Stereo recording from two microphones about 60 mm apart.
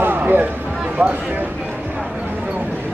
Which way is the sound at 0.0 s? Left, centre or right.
Right.